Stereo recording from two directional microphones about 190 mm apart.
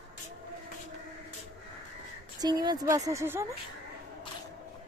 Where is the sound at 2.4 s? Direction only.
20° right (ahead or behind).